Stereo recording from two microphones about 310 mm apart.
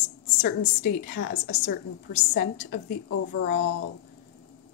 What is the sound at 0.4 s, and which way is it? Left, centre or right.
A woman's voice, left.